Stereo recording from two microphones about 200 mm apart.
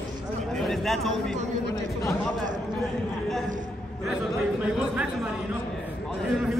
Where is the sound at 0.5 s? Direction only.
Centre (ahead or behind).